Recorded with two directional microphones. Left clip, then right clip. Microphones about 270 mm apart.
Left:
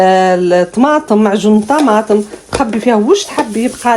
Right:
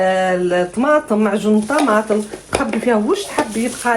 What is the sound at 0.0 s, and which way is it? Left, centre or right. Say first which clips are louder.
Speech: left 7 dB; left.